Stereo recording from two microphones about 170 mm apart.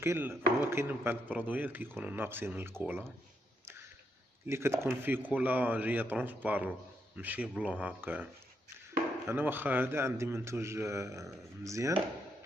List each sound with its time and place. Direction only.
0.0 s speech: 15° right (ahead or behind)
4.5 s speech: 15° right (ahead or behind)
9.3 s speech: 10° right (ahead or behind)